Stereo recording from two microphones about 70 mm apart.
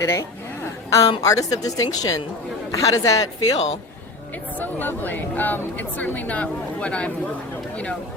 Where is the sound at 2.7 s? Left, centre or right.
Left.